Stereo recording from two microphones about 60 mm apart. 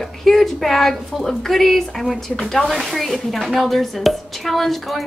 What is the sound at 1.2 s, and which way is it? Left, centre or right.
Speech, centre.